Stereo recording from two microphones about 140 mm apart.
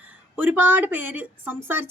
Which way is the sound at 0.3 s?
15° right (ahead or behind).